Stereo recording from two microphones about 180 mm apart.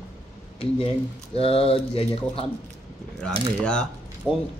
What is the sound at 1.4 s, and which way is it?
A man's voice, 30° left (ahead or behind).